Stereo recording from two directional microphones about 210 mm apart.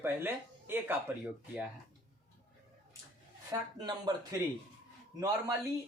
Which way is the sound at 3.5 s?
20° right (ahead or behind).